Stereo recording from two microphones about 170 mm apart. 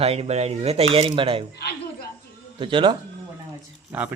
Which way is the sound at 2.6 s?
30° right (ahead or behind).